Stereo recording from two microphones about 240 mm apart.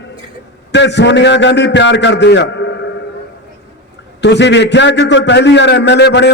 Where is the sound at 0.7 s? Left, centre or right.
Left.